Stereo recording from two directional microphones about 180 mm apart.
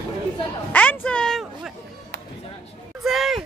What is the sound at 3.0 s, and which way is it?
Speech, centre (ahead or behind).